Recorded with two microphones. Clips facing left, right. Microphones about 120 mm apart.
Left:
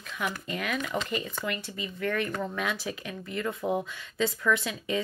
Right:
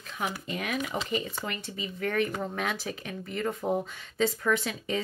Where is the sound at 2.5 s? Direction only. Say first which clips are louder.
Even; 45° right (ahead or behind).